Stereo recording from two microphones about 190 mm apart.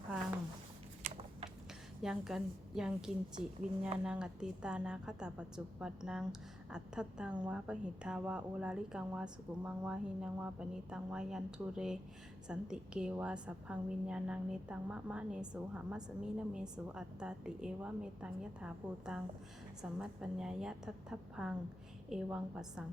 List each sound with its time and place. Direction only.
1.0 s typing: 35° right (ahead or behind)
2.0 s a woman's voice: centre (ahead or behind)